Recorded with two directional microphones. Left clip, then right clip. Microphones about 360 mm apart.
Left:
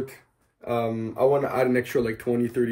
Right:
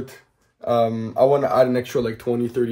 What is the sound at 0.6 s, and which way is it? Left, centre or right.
Speech, right.